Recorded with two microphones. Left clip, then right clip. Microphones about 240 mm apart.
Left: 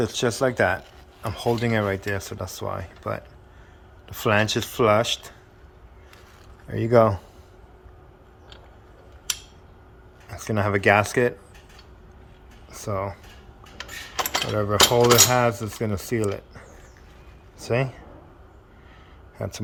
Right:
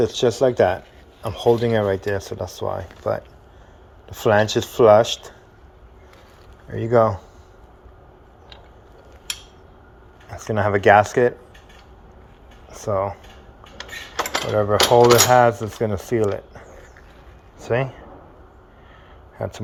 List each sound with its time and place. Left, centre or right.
0.0 s cutlery: centre
4.0 s speech: centre
4.4 s cutlery: centre
6.7 s speech: left
10.2 s cutlery: centre
12.7 s cutlery: centre
14.5 s cutlery: centre
17.6 s speech: left
19.4 s speech: centre